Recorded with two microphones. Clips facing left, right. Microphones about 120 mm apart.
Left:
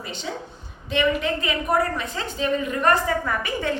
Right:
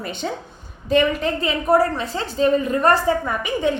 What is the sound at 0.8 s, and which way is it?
A woman's voice, 40° right (ahead or behind).